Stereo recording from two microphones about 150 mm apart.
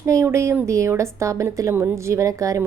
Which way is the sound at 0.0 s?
20° right (ahead or behind).